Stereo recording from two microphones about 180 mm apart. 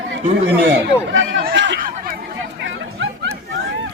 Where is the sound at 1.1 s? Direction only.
90° right.